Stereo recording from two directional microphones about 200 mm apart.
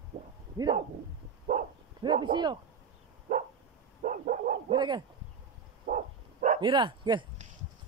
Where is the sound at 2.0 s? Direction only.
25° right (ahead or behind).